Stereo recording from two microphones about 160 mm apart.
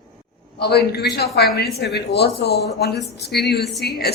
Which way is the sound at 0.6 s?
85° left.